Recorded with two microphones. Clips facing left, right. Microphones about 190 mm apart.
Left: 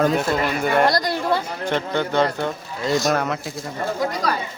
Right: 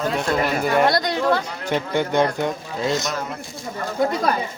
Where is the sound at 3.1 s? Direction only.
80° left.